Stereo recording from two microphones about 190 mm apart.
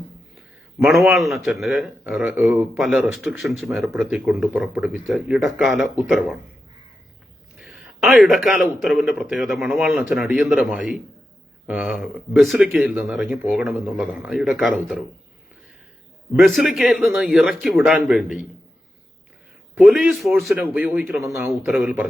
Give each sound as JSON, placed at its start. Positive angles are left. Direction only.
{"t": 0.8, "sound": "a man's voice", "side_deg": 0}
{"t": 7.6, "sound": "a sound", "side_deg": 0}
{"t": 8.8, "sound": "a man's voice", "side_deg": 0}
{"t": 16.4, "sound": "a man's voice", "side_deg": 0}
{"t": 19.7, "sound": "a man's voice", "side_deg": 0}